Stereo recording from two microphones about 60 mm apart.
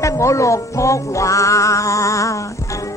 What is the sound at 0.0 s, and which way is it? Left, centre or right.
Music, left.